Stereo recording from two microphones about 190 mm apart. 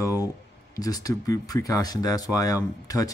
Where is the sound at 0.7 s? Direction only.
20° left (ahead or behind).